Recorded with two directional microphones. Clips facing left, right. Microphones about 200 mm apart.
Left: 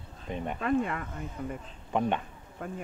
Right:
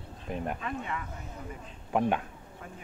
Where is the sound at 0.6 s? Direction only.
50° left (ahead or behind).